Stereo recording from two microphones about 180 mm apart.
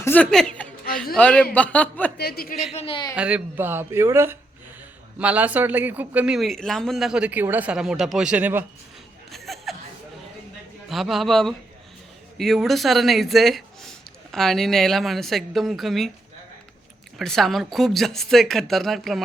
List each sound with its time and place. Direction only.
0.0 s a woman's voice: 10° left (ahead or behind)
2.1 s a man's voice: 60° left (ahead or behind)
2.7 s a man's voice: 30° left (ahead or behind)
3.2 s speech: 10° right (ahead or behind)
9.3 s a sound: centre (ahead or behind)
10.8 s speech: centre (ahead or behind)
17.2 s speech: centre (ahead or behind)